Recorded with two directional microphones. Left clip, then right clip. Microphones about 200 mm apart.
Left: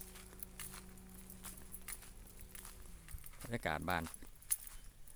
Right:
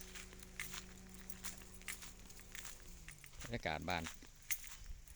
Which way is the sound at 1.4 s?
Centre (ahead or behind).